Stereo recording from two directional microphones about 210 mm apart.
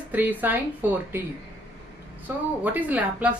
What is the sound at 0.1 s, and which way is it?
A woman's voice, 10° right (ahead or behind).